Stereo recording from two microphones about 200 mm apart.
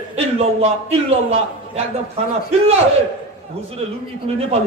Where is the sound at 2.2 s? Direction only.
30° right (ahead or behind).